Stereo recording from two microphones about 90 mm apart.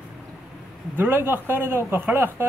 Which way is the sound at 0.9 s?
25° right (ahead or behind).